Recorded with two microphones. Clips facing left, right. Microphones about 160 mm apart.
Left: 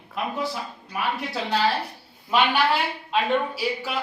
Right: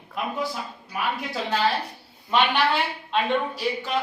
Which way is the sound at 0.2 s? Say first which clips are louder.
Left 1 dB; centre (ahead or behind).